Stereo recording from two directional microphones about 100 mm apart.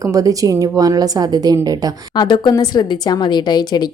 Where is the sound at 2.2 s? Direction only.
50° left (ahead or behind).